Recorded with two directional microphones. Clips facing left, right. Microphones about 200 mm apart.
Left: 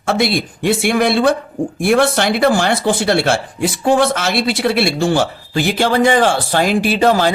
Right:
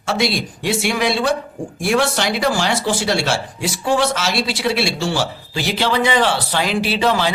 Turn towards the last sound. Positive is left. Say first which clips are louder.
# left 5 dB
turn(degrees=45)  # may be behind; listen again after turning